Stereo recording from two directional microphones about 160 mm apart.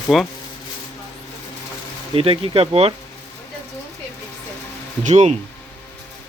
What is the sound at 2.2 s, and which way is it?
Speech, 35° right (ahead or behind).